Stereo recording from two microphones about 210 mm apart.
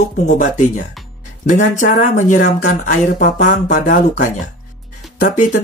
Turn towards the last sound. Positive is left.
turn(degrees=35)  # may be behind; listen again after turning